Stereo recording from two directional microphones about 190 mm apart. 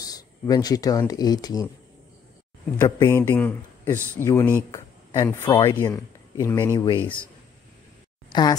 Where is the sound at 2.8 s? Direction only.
15° left (ahead or behind).